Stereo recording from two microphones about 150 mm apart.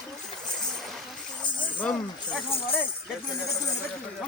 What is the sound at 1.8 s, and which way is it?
Speech, 5° left (ahead or behind).